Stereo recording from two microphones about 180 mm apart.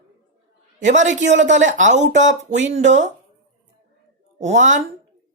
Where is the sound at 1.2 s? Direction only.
90° right.